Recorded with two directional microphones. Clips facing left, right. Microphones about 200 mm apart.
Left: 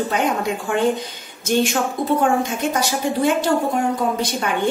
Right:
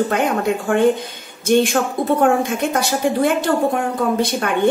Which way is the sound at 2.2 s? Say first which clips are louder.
Right 3 dB; 55° right (ahead or behind).